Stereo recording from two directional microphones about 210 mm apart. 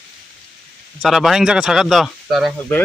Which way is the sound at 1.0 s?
Centre (ahead or behind).